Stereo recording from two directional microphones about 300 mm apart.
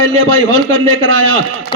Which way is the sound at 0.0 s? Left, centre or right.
Right.